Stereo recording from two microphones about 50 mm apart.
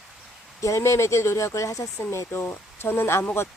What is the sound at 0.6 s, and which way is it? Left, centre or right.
Speech, left.